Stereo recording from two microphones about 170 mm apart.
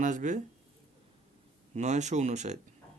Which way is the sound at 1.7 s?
45° right (ahead or behind).